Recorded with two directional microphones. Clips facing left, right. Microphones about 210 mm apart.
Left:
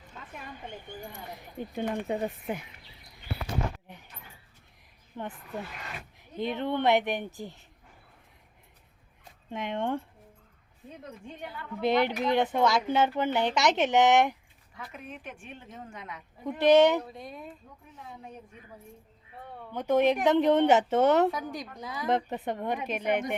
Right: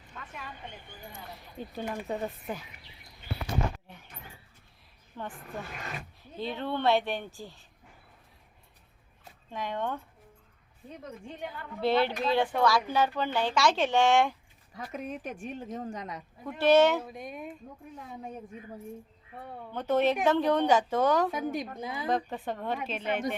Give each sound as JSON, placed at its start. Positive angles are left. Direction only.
{"t": 1.3, "sound": "a woman's voice", "side_deg": 15}
{"t": 5.2, "sound": "speech", "side_deg": 20}
{"t": 6.3, "sound": "speech", "side_deg": 20}
{"t": 9.5, "sound": "speech", "side_deg": 25}
{"t": 11.8, "sound": "a woman's voice", "side_deg": 15}
{"t": 14.7, "sound": "speech", "side_deg": -40}
{"t": 16.4, "sound": "a woman's voice", "side_deg": 15}
{"t": 17.2, "sound": "speech", "side_deg": -15}
{"t": 19.7, "sound": "a woman's voice", "side_deg": 10}
{"t": 21.3, "sound": "a woman's voice", "side_deg": -25}
{"t": 22.1, "sound": "a woman's voice", "side_deg": 20}